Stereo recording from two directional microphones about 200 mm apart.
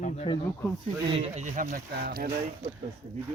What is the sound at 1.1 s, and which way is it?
Speech, 35° right (ahead or behind).